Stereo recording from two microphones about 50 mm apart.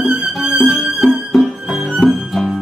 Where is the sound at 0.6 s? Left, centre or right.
Centre.